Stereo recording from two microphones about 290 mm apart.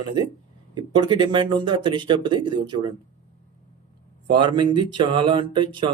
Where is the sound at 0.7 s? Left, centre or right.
Centre.